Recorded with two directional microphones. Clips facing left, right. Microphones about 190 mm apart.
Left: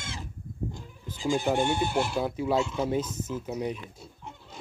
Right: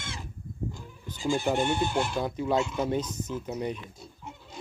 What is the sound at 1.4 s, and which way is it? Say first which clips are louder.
Speech: left 1 dB; 10° left (ahead or behind).